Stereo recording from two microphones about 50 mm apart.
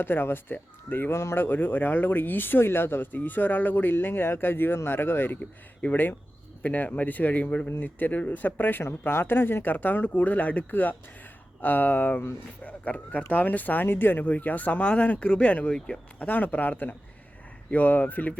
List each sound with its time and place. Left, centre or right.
0.0 s speech: left
1.1 s speech: left
1.5 s speech: left
3.1 s speech: left
8.8 s speech: left
13.8 s speech: left
14.3 s speech: left